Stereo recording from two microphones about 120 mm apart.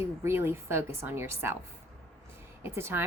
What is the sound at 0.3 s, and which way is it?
A woman's voice, 20° right (ahead or behind).